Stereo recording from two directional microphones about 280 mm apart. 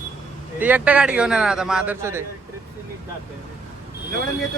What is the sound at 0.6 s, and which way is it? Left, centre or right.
A man's voice, centre.